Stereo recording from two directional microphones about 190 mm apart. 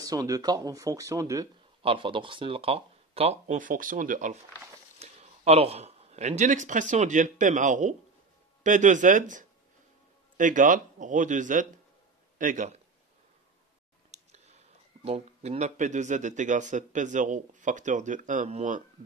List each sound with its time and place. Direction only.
0.0 s speech: 20° right (ahead or behind)
1.8 s a man's voice: 25° right (ahead or behind)
14.3 s a sound: 35° right (ahead or behind)
15.0 s speech: 30° right (ahead or behind)